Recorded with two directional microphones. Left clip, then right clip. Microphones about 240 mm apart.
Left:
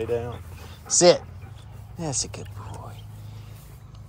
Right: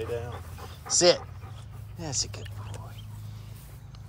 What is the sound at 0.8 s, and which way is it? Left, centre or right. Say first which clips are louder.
Speech: left 5 dB; centre.